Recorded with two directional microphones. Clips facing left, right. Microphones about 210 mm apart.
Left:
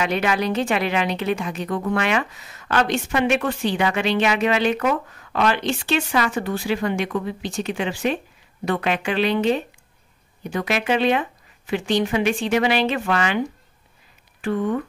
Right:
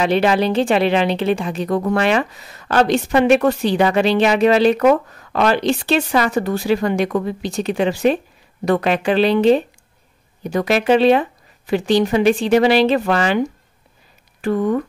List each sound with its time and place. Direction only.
0.0 s speech: 35° right (ahead or behind)